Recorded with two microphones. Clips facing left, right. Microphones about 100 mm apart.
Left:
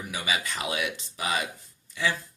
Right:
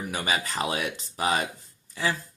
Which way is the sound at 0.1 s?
40° right (ahead or behind).